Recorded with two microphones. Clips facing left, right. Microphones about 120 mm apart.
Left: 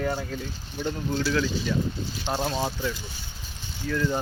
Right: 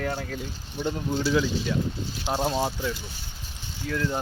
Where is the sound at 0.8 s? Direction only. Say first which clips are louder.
Right 1 dB; 15° right (ahead or behind).